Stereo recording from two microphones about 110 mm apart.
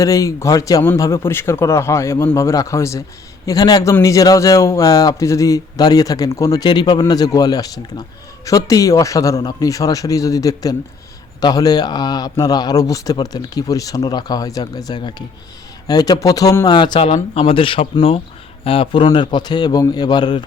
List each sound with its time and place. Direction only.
0.0 s a man's voice: 30° left (ahead or behind)
17.3 s a man's voice: 55° left (ahead or behind)